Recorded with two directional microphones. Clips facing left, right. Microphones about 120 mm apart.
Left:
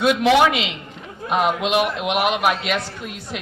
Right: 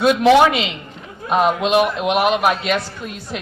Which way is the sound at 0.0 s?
35° right (ahead or behind).